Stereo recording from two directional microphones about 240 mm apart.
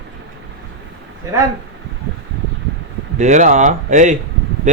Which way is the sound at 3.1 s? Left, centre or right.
Right.